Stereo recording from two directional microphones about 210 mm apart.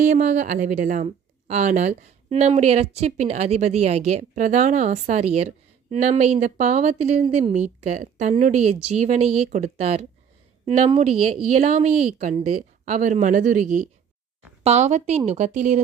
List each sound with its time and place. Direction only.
0.1 s speech: 35° right (ahead or behind)